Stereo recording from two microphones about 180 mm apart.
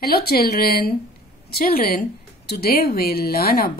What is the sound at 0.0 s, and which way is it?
Speech, 60° left (ahead or behind).